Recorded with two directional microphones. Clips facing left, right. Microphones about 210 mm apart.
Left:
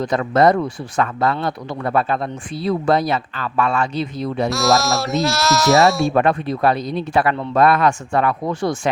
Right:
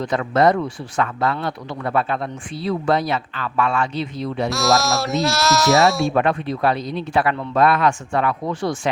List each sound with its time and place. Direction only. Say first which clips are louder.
0.0 s speech: left 2 dB; 40° left (ahead or behind)
4.4 s speech: left 1 dB; centre (ahead or behind)
6.1 s speech: left 2 dB; 40° left (ahead or behind)